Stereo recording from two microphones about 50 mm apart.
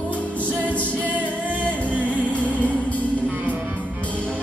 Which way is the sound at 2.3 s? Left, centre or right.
Left.